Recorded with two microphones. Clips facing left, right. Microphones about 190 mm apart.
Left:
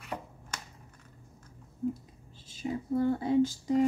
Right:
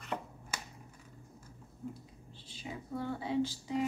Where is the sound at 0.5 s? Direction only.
10° right (ahead or behind).